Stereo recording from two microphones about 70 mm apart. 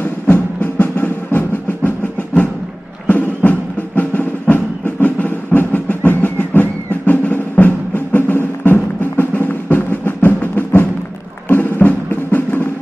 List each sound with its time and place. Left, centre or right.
0.0 s music: left